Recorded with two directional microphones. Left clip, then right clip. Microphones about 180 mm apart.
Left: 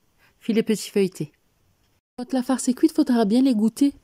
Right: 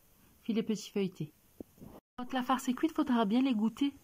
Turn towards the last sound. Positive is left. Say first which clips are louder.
# left 12 dB
turn(degrees=20)  # may be behind; listen again after turning